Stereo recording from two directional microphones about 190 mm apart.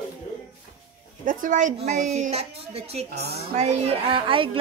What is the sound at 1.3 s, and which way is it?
A woman's voice, 45° right (ahead or behind).